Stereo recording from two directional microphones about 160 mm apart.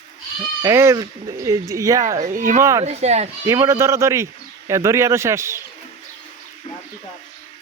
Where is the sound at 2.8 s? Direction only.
45° right (ahead or behind).